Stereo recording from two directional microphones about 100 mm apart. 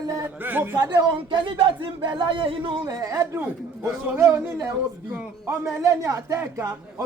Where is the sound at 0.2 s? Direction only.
20° right (ahead or behind).